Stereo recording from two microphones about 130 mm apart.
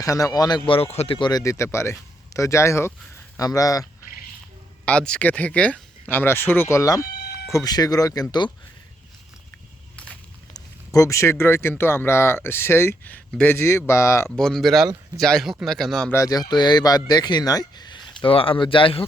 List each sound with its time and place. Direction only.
0.0 s speech: 25° left (ahead or behind); by 1.3 s 45° left (ahead or behind)
1.3 s speech: 25° left (ahead or behind)
4.9 s speech: 5° left (ahead or behind); by 8.4 s 30° left (ahead or behind)
10.5 s speech: 25° left (ahead or behind)
14.3 s speech: 5° left (ahead or behind)
16.1 s speech: 25° left (ahead or behind); by 19.0 s 45° left (ahead or behind)